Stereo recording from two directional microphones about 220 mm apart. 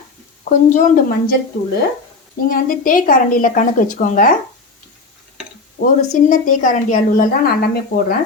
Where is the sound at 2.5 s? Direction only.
40° left (ahead or behind).